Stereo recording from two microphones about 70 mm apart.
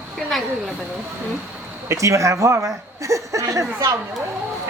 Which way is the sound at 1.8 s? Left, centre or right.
Right.